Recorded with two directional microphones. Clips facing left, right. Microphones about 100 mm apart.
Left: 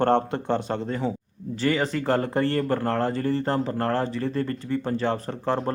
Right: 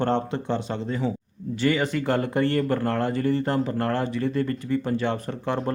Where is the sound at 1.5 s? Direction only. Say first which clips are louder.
Right 1 dB; 35° left (ahead or behind).